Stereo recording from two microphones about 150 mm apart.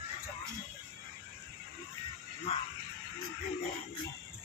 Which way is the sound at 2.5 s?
45° left (ahead or behind).